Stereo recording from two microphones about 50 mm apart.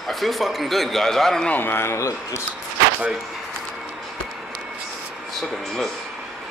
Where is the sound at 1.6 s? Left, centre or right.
Left.